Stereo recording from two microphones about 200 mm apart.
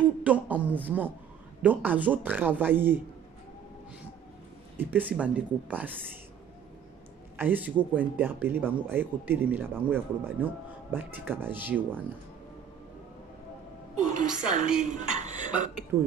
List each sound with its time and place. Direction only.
0.0 s a sound: 10° right (ahead or behind)
0.7 s speech: 10° right (ahead or behind)
4.7 s speech: 10° right (ahead or behind)
7.3 s speech: 10° right (ahead or behind)
14.5 s speech: 40° right (ahead or behind)